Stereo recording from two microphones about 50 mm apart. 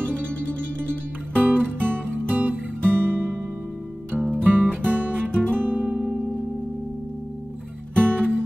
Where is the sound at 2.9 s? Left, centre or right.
Right.